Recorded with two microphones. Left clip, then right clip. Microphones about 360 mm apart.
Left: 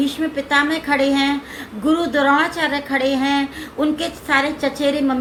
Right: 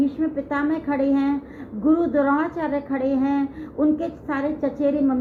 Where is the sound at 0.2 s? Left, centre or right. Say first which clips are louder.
Left 6 dB; centre.